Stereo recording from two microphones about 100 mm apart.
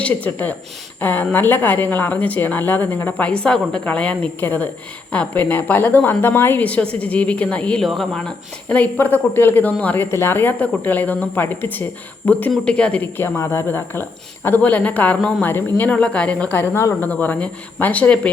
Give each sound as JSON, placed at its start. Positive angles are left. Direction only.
{"t": 0.0, "sound": "speech", "side_deg": 15}
{"t": 8.7, "sound": "speech", "side_deg": 15}